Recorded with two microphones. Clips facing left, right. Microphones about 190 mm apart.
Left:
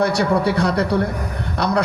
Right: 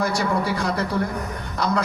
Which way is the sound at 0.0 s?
65° left (ahead or behind).